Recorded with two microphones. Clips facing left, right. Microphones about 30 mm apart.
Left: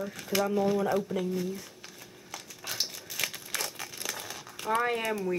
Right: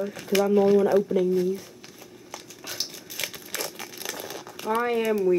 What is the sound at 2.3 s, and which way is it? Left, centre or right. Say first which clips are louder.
Crumpling: right 1 dB; centre.